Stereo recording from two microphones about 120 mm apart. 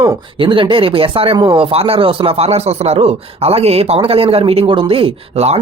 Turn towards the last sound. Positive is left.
turn(degrees=-60)  # may be behind; listen again after turning